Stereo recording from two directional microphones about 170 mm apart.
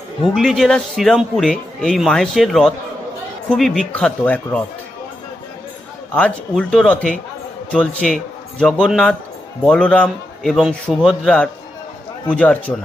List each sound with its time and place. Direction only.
0.2 s a man's voice: centre (ahead or behind)
6.1 s a man's voice: 5° left (ahead or behind)